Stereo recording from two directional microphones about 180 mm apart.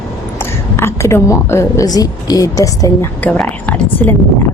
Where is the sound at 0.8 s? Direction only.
15° left (ahead or behind).